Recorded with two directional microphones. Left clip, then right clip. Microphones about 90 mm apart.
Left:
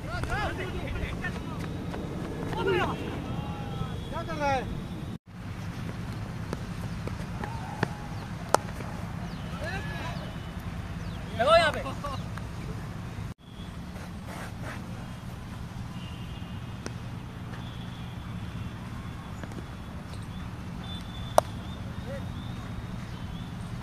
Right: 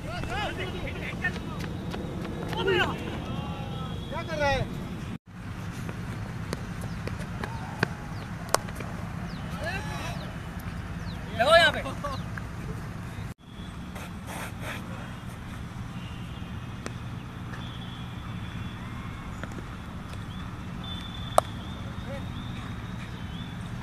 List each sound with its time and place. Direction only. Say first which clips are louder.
0.1 s vehicle: even; centre (ahead or behind)
4.3 s vehicle: right 2 dB; 45° right (ahead or behind)
7.8 s a sound: right 3 dB; 15° right (ahead or behind)
8.5 s a sound: left 2 dB; centre (ahead or behind)
9.7 s vehicle: right 2 dB; centre (ahead or behind)
11.3 s vehicle: right 2 dB; 5° left (ahead or behind)